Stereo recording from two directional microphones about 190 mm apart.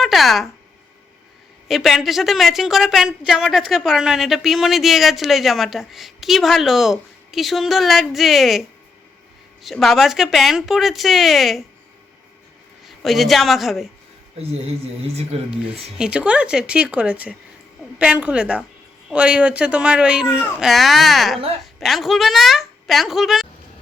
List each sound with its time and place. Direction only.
0.0 s a sound: centre (ahead or behind)
1.6 s a woman's voice: centre (ahead or behind)
9.6 s a woman's voice: centre (ahead or behind)
13.0 s a woman's voice: centre (ahead or behind)
14.3 s a woman's voice: 35° right (ahead or behind)
16.0 s a woman's voice: 5° right (ahead or behind)